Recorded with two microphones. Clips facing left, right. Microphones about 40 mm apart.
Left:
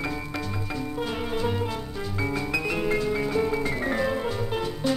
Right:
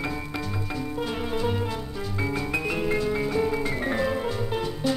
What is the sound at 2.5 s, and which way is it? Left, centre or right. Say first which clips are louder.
Music: even; right.